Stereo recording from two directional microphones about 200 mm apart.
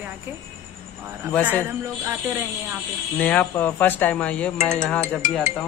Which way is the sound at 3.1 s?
5° left (ahead or behind).